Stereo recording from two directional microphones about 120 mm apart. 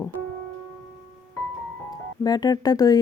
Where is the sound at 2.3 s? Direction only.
35° left (ahead or behind).